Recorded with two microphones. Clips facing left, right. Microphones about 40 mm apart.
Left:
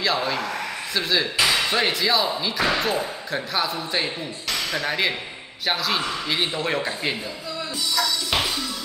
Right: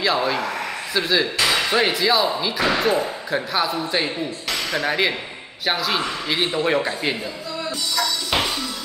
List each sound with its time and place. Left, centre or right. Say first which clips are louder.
0.0 s speech: right 3 dB; centre
7.9 s music: right 1 dB; centre